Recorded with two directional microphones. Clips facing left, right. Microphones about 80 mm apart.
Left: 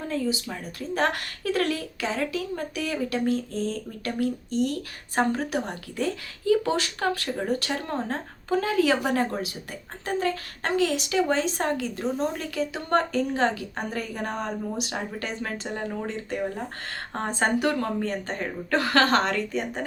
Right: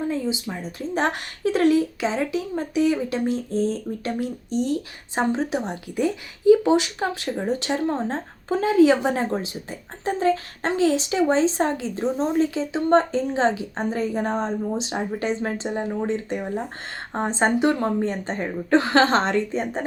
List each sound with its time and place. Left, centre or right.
0.1 s speech: centre